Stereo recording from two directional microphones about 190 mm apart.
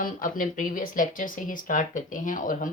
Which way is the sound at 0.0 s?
45° left (ahead or behind).